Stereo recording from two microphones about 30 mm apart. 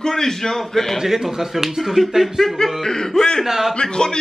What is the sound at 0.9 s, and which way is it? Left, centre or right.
A man's voice, centre.